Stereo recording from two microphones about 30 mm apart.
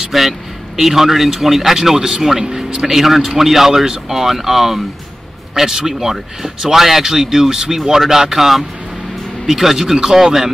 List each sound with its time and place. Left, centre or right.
0.1 s a man's voice: centre
3.3 s a man's voice: centre
5.7 s speech: right
6.7 s a man's voice: centre
9.8 s a man's voice: right